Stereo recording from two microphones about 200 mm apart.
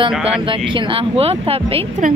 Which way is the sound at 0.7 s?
25° right (ahead or behind).